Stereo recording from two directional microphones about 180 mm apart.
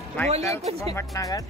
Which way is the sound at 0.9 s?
20° left (ahead or behind).